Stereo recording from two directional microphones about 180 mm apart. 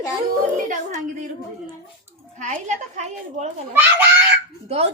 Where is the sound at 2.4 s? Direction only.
40° right (ahead or behind).